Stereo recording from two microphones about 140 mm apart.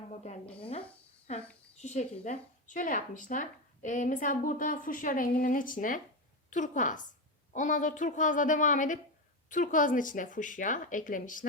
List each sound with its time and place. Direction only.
0.6 s speech: 40° left (ahead or behind)
1.3 s speech: 50° left (ahead or behind); by 6.0 s 75° left (ahead or behind)
6.5 s a woman's voice: 65° left (ahead or behind)